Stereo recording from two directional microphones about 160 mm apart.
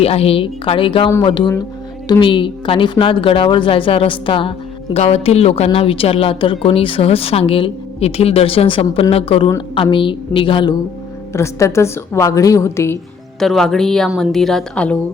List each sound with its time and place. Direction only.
0.0 s speech: 40° left (ahead or behind)
11.3 s a woman's voice: 15° left (ahead or behind)
13.4 s a woman's voice: centre (ahead or behind)